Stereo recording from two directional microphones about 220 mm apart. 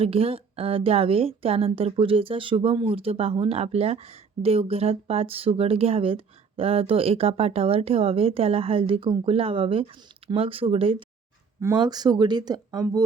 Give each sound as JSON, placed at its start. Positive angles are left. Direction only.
{"t": 0.0, "sound": "a woman's voice", "side_deg": -25}